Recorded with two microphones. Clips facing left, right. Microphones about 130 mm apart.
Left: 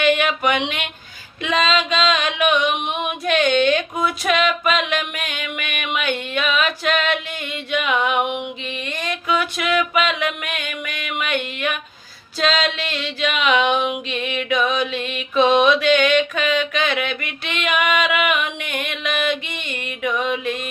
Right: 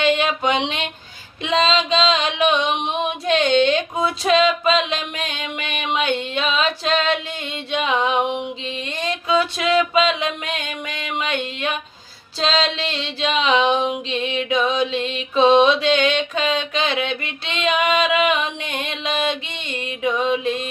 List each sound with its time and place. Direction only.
0.0 s mantra: 25° right (ahead or behind)
1.4 s female singing: 25° right (ahead or behind)
12.4 s music: 25° right (ahead or behind)